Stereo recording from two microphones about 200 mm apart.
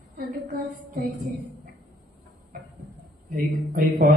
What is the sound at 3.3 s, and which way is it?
Speech, 45° right (ahead or behind).